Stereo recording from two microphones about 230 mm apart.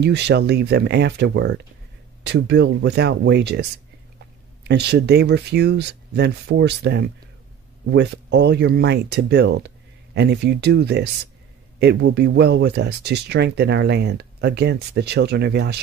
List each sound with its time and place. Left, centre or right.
0.0 s speech: right
4.6 s speech: right